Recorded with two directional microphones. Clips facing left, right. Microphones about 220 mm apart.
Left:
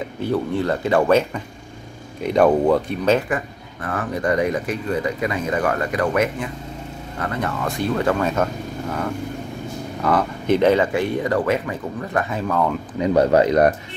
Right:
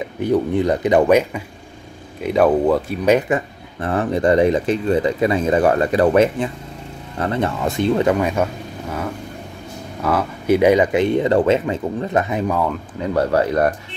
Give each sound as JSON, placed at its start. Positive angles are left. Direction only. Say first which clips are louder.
{"t": 0.2, "sound": "speech", "louder": "right 4 dB", "side_deg": -15}
{"t": 2.2, "sound": "speech", "louder": "right 1 dB", "side_deg": -5}
{"t": 3.8, "sound": "speech", "louder": "right 6 dB", "side_deg": -25}
{"t": 10.0, "sound": "speech", "louder": "right 1 dB", "side_deg": -5}
{"t": 13.0, "sound": "speech", "louder": "left 2 dB", "side_deg": 20}